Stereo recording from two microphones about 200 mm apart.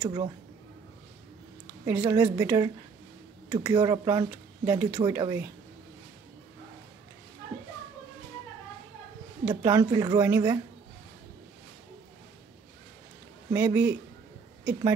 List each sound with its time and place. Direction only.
0.0 s speech: 20° right (ahead or behind)
1.9 s speech: 15° right (ahead or behind)
9.4 s speech: 15° right (ahead or behind)
13.5 s speech: 15° right (ahead or behind)